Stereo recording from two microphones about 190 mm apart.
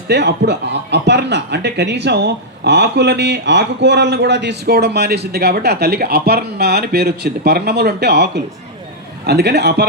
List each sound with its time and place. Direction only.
0.1 s speech: 65° right (ahead or behind)